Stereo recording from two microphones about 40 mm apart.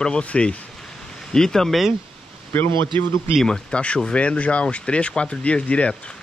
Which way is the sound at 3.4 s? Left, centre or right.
Centre.